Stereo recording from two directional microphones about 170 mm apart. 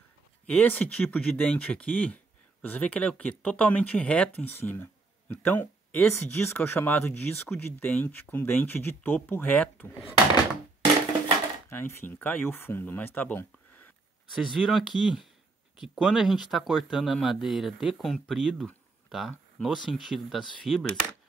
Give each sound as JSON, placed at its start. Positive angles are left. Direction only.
{"t": 0.5, "sound": "speech", "side_deg": 10}
{"t": 10.0, "sound": "door", "side_deg": 25}
{"t": 11.7, "sound": "speech", "side_deg": 10}
{"t": 14.3, "sound": "speech", "side_deg": 0}